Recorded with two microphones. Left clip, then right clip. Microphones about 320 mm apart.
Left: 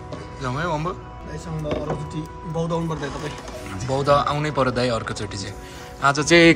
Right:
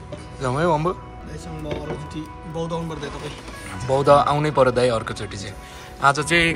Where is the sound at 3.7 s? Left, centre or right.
Centre.